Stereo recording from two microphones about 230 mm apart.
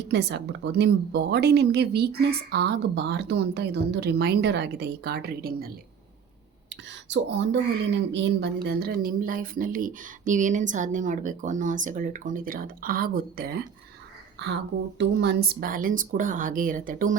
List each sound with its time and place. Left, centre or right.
0.1 s a woman's voice: right
6.7 s a woman's voice: right